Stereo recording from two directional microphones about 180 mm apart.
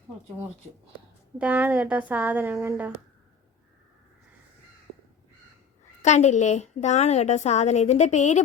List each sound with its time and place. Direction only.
1.4 s speech: 10° right (ahead or behind)
6.0 s a woman's voice: 40° left (ahead or behind)